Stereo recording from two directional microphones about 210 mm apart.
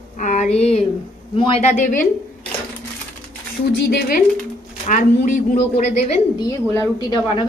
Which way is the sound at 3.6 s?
50° left (ahead or behind).